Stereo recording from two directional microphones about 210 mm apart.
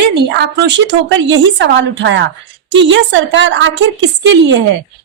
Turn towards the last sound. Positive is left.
turn(degrees=-60)  # may be behind; listen again after turning